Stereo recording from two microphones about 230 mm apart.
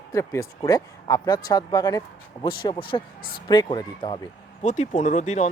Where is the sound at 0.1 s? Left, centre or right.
Centre.